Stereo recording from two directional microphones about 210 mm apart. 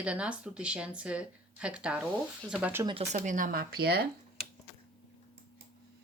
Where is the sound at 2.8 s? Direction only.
30° right (ahead or behind); by 4.0 s 50° right (ahead or behind).